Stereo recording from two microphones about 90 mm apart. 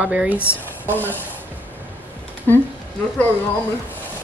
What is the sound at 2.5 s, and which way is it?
Speech, 25° left (ahead or behind).